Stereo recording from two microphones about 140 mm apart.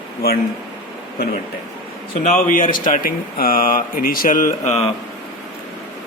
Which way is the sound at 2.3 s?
80° left.